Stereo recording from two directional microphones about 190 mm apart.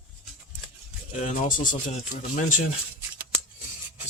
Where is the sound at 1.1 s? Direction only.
40° left (ahead or behind).